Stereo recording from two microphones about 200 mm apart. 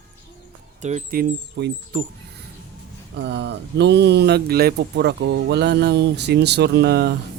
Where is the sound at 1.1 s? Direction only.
55° right (ahead or behind).